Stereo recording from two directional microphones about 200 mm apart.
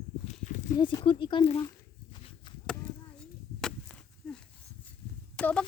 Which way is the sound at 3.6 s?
5° left (ahead or behind).